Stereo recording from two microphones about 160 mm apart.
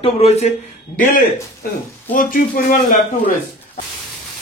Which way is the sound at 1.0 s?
55° left (ahead or behind).